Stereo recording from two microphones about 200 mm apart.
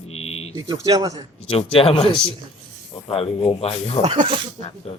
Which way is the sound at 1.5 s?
30° left (ahead or behind).